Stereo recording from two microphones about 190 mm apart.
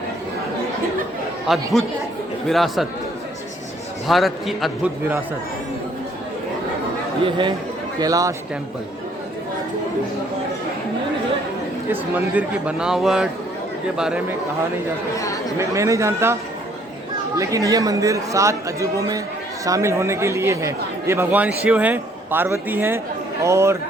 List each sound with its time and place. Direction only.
1.5 s speech: centre (ahead or behind)
4.1 s speech: centre (ahead or behind)
7.3 s speech: 25° right (ahead or behind)
11.9 s speech: 10° right (ahead or behind)
15.5 s speech: 15° right (ahead or behind)